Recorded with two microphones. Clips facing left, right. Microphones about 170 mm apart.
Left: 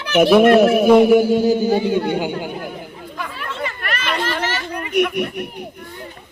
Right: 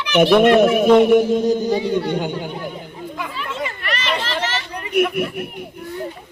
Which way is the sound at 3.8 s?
55° left (ahead or behind).